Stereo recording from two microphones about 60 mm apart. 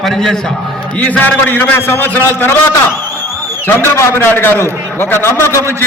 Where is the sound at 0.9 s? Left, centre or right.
Left.